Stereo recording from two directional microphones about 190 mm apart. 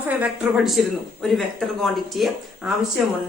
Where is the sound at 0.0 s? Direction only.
5° right (ahead or behind).